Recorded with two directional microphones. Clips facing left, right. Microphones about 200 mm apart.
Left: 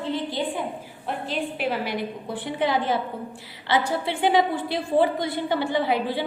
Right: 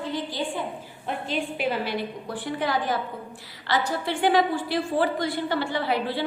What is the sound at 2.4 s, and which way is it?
Speech, 20° left (ahead or behind).